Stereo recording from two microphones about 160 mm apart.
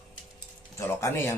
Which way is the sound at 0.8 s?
15° left (ahead or behind).